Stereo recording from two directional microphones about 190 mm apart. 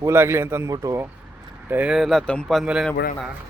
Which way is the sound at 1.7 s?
5° right (ahead or behind).